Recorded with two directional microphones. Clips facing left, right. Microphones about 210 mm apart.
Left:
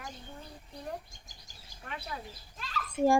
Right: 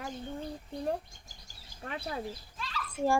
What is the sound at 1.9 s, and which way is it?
Speech, 50° right (ahead or behind).